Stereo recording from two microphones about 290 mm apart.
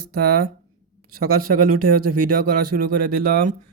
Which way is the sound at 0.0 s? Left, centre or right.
Right.